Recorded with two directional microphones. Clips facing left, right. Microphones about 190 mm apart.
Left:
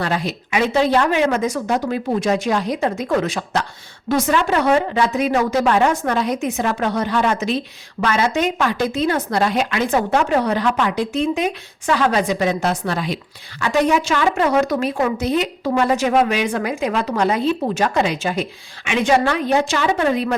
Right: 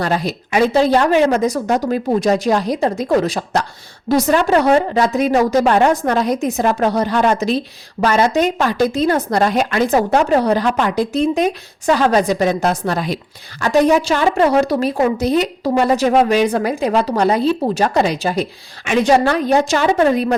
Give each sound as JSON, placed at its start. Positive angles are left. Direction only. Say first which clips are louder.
{"t": 0.0, "sound": "a woman's voice", "louder": "right 3 dB", "side_deg": -40}